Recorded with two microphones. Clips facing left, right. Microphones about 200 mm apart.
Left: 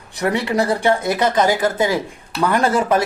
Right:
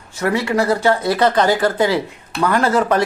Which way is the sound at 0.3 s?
20° left (ahead or behind).